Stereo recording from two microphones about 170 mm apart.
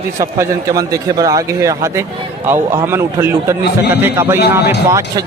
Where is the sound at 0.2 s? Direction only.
20° right (ahead or behind).